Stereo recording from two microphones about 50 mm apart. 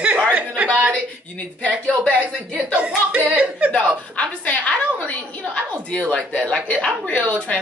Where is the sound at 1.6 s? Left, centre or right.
Left.